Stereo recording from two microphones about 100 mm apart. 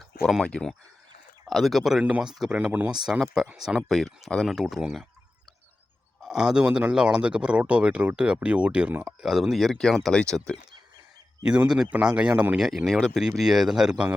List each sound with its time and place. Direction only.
0.2 s speech: centre (ahead or behind)
0.4 s speech: 10° left (ahead or behind); by 2.9 s 15° right (ahead or behind)
3.1 s speech: 5° right (ahead or behind)
6.2 s speech: 5° right (ahead or behind)
11.7 s speech: 10° right (ahead or behind)